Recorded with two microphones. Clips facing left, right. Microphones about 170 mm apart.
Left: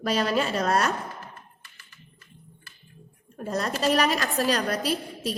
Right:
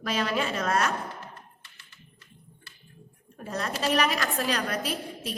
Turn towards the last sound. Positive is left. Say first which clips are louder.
# left 5 dB
turn(degrees=35)  # may be behind; listen again after turning